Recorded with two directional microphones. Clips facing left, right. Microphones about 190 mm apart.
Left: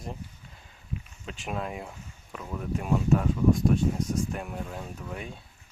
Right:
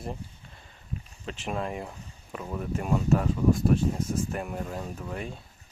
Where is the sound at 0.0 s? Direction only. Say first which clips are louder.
Right 2 dB; centre (ahead or behind).